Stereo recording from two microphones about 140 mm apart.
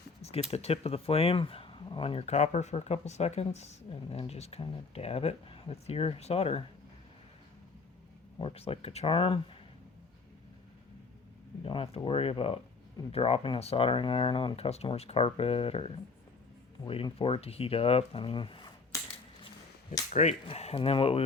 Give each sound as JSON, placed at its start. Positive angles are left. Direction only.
{"t": 0.2, "sound": "a sound", "side_deg": 45}
{"t": 0.5, "sound": "speech", "side_deg": 45}
{"t": 8.4, "sound": "speech", "side_deg": 45}
{"t": 11.6, "sound": "speech", "side_deg": 40}
{"t": 19.9, "sound": "speech", "side_deg": 55}